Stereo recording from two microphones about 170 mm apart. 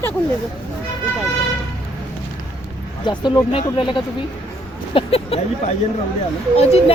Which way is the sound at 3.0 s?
25° left (ahead or behind).